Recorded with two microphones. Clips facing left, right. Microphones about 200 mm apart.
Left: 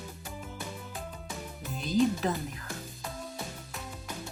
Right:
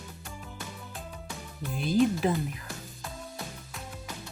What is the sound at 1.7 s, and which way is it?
Speech, 10° right (ahead or behind).